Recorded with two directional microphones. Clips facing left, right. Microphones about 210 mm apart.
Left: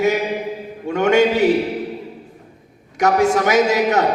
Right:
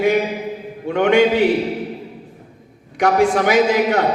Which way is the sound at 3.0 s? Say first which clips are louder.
Even; 45° left (ahead or behind).